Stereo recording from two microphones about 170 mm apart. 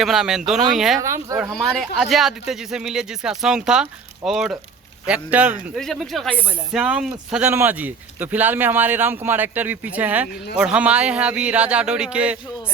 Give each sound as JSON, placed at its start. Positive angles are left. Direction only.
{"t": 0.0, "sound": "speech", "side_deg": 0}
{"t": 0.9, "sound": "speech", "side_deg": -20}
{"t": 1.4, "sound": "speech", "side_deg": 0}